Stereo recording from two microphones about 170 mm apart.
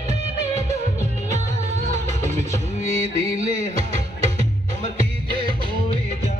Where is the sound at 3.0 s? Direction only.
35° right (ahead or behind).